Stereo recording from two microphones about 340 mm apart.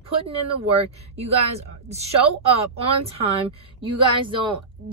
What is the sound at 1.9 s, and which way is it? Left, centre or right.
A woman's voice, centre.